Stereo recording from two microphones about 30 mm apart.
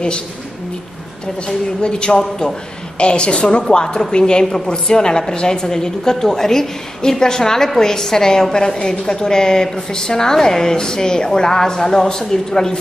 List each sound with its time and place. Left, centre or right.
1.8 s a woman's voice: left
3.7 s a woman's voice: left